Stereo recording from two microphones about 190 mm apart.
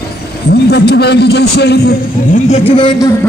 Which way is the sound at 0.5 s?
60° left (ahead or behind).